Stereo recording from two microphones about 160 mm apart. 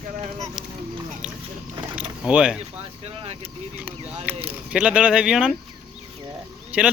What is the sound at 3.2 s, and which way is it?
Vehicle, 40° right (ahead or behind).